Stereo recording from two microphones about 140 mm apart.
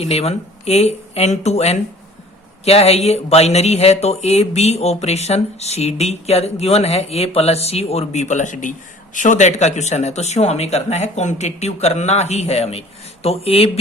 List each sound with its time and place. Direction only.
0.0 s speech: 50° left (ahead or behind)